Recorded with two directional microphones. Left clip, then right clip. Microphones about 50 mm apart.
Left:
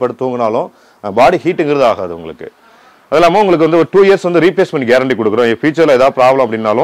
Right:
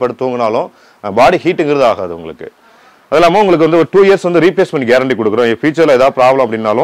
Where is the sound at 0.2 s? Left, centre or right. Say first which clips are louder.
Right 1 dB; centre.